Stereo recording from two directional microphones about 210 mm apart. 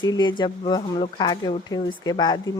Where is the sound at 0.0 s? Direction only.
20° left (ahead or behind).